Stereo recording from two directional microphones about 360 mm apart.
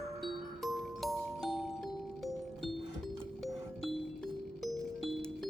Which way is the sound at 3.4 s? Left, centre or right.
Centre.